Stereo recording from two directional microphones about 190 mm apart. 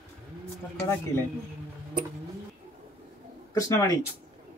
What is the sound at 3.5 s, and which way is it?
Speech, 15° left (ahead or behind).